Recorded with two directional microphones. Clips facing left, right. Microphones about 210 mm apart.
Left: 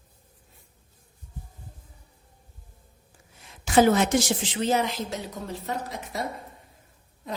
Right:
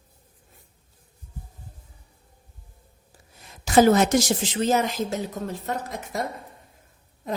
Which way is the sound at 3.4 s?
40° right (ahead or behind).